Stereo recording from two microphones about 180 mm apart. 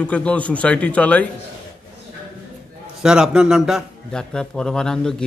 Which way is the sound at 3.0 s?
5° right (ahead or behind).